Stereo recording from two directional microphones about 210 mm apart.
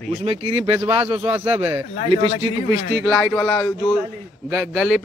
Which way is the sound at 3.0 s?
5° left (ahead or behind).